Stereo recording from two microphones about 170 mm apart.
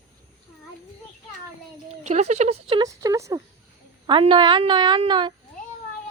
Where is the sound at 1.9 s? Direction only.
40° right (ahead or behind).